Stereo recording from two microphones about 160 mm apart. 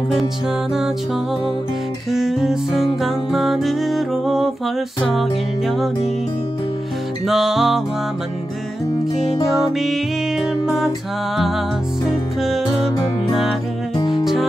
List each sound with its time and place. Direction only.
2.0 s music: centre (ahead or behind)
7.2 s music: centre (ahead or behind)
9.7 s music: centre (ahead or behind)
12.4 s music: centre (ahead or behind)
13.9 s music: 25° left (ahead or behind)